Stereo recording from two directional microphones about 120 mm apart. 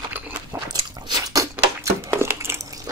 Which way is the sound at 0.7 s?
35° right (ahead or behind).